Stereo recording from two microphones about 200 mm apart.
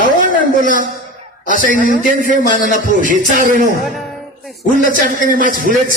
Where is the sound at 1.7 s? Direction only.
40° right (ahead or behind).